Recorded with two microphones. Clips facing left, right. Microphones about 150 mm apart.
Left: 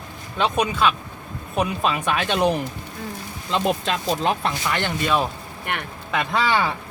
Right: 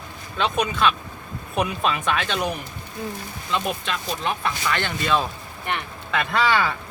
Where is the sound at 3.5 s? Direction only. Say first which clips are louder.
Left 4 dB; 30° left (ahead or behind).